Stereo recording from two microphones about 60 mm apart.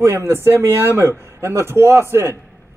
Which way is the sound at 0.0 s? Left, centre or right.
Right.